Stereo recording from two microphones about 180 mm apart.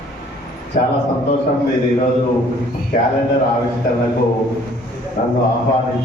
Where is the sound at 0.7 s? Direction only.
55° left (ahead or behind).